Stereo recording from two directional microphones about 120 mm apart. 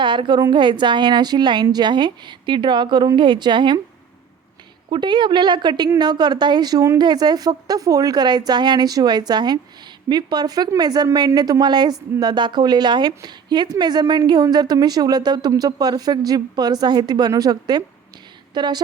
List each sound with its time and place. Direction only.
0.0 s a woman's voice: 40° right (ahead or behind)
4.9 s a woman's voice: 40° right (ahead or behind)